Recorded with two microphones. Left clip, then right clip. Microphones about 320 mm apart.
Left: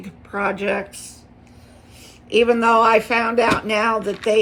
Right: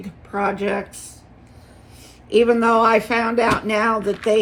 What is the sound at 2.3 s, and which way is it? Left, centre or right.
Speech, centre.